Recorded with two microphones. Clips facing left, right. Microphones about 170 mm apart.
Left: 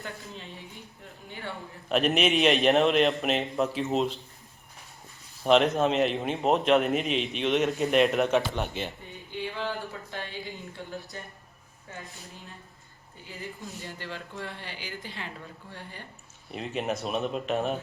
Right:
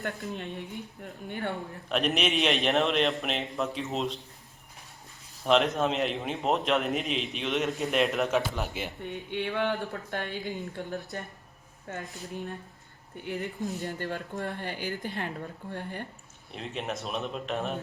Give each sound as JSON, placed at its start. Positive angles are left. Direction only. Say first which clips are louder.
{"t": 0.2, "sound": "speech", "louder": "right 7 dB", "side_deg": -60}
{"t": 1.9, "sound": "a man's voice", "louder": "left 3 dB", "side_deg": 0}
{"t": 5.5, "sound": "a man's voice", "louder": "left 3 dB", "side_deg": 0}
{"t": 9.3, "sound": "speech", "louder": "right 3 dB", "side_deg": -65}
{"t": 13.2, "sound": "speech", "louder": "right 7 dB", "side_deg": -70}
{"t": 13.8, "sound": "speech", "louder": "right 5 dB", "side_deg": -50}
{"t": 16.5, "sound": "a man's voice", "louder": "left 4 dB", "side_deg": 5}